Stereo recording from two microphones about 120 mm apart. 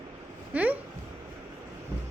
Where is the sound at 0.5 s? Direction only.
15° right (ahead or behind).